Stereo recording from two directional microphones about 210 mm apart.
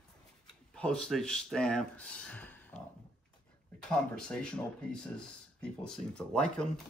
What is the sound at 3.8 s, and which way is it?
Speech, 5° left (ahead or behind).